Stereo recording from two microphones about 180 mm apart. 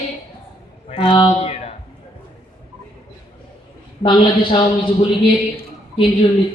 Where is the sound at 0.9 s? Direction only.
30° left (ahead or behind).